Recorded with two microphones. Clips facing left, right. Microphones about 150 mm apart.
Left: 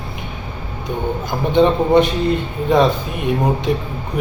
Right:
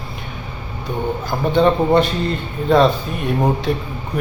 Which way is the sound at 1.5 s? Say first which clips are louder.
Left 1 dB; 20° left (ahead or behind).